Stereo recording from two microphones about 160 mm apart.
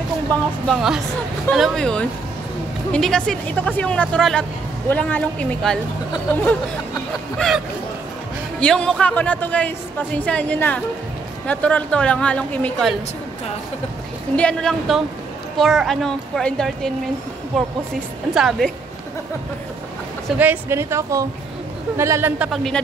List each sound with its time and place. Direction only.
0.7 s a woman's voice: centre (ahead or behind)
7.3 s a woman's voice: centre (ahead or behind)
14.3 s a woman's voice: 5° left (ahead or behind)
18.3 s a woman's voice: centre (ahead or behind)
20.3 s speech: 10° right (ahead or behind)
22.4 s a woman's voice: centre (ahead or behind)